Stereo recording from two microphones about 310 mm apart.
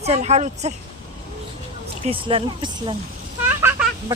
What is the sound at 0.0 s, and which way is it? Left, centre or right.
Speech, right.